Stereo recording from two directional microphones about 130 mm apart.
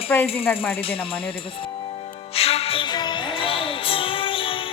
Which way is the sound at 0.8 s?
45° left (ahead or behind).